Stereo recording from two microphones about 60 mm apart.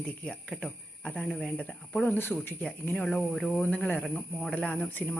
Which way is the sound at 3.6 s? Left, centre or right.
Left.